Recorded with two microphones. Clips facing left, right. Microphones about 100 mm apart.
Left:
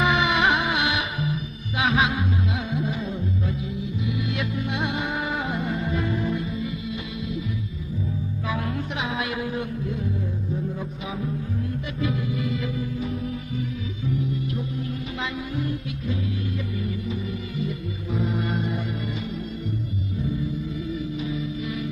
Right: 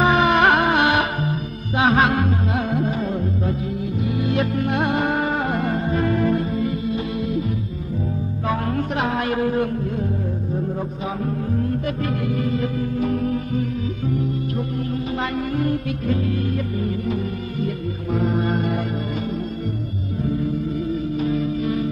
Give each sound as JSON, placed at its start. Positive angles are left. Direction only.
{"t": 0.0, "sound": "music", "side_deg": -40}
{"t": 6.0, "sound": "music", "side_deg": -55}
{"t": 8.5, "sound": "music", "side_deg": -45}
{"t": 11.5, "sound": "music", "side_deg": -50}
{"t": 13.1, "sound": "music", "side_deg": -60}
{"t": 15.3, "sound": "music", "side_deg": -55}
{"t": 18.1, "sound": "music", "side_deg": -45}
{"t": 20.9, "sound": "music", "side_deg": -45}